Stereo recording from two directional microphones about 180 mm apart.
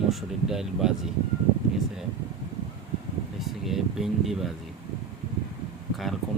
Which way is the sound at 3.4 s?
Centre (ahead or behind).